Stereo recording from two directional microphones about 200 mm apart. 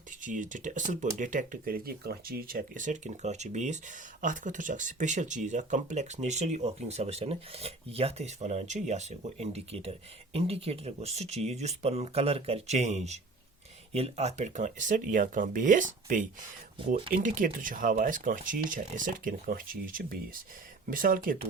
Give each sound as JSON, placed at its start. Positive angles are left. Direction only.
{"t": 0.2, "sound": "speech", "side_deg": -40}
{"t": 17.2, "sound": "speech", "side_deg": -40}